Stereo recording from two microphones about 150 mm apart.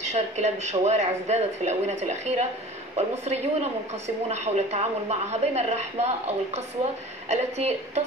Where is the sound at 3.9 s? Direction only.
45° right (ahead or behind).